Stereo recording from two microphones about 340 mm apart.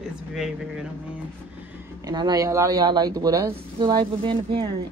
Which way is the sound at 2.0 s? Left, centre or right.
Centre.